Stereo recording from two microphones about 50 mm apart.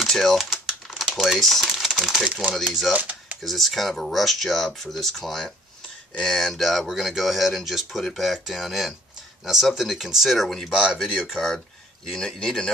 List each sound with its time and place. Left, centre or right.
0.0 s speech: centre
2.9 s typewriter: right
3.4 s speech: centre